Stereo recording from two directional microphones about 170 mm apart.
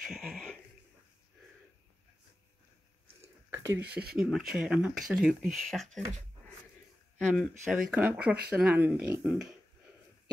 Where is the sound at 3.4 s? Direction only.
10° right (ahead or behind).